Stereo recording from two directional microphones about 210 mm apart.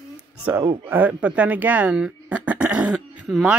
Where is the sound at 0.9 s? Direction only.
10° right (ahead or behind).